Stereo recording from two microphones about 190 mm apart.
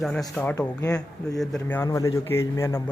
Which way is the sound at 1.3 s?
Centre (ahead or behind).